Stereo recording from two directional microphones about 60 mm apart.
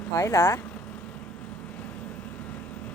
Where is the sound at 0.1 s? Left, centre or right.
Left.